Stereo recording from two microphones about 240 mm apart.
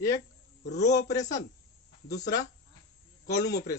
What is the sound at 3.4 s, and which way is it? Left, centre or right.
Speech, left.